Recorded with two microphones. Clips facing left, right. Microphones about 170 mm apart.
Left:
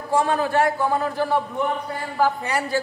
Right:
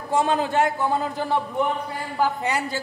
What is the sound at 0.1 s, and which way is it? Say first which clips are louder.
Speech: left 1 dB; 20° right (ahead or behind).